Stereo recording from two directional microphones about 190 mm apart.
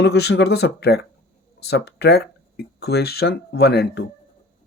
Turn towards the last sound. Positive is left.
turn(degrees=60)  # may be behind; listen again after turning